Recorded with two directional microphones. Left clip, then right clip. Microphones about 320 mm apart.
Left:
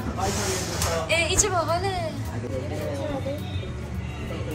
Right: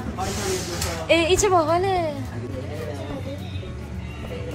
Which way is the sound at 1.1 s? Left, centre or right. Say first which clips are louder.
Right 7 dB; centre.